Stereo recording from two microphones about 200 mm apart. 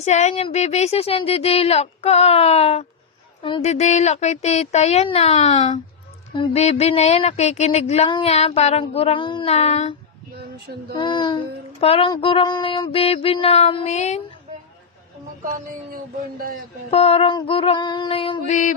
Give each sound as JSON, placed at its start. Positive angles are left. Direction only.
{"t": 0.0, "sound": "a sound", "side_deg": 35}
{"t": 10.9, "sound": "child singing", "side_deg": 25}
{"t": 16.9, "sound": "child singing", "side_deg": 30}